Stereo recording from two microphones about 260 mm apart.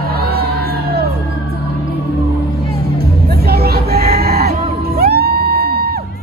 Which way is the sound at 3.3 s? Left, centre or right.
Right.